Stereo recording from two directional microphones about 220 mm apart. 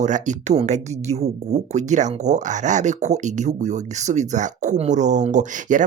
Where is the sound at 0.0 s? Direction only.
35° right (ahead or behind).